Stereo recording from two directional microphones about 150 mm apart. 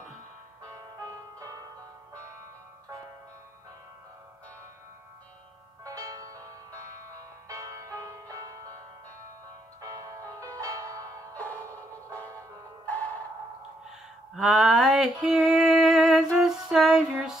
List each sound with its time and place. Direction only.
0.7 s music: 20° right (ahead or behind)
5.9 s music: 25° right (ahead or behind)
9.8 s music: 25° right (ahead or behind)
11.3 s music: 10° left (ahead or behind)
14.3 s music: centre (ahead or behind)
17.1 s a sound: 5° right (ahead or behind)